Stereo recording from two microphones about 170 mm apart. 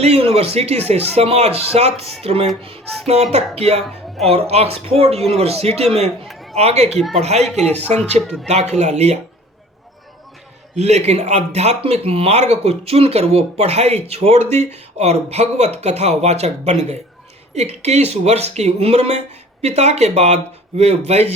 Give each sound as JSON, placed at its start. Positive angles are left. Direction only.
{"t": 0.0, "sound": "speech", "side_deg": -35}
{"t": 6.2, "sound": "a sound", "side_deg": 0}
{"t": 6.5, "sound": "speech", "side_deg": -40}
{"t": 6.9, "sound": "speech", "side_deg": 0}
{"t": 7.2, "sound": "speech", "side_deg": -40}
{"t": 10.8, "sound": "speech", "side_deg": -40}